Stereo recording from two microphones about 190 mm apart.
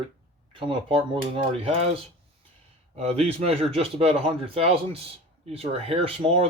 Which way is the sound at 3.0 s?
35° right (ahead or behind).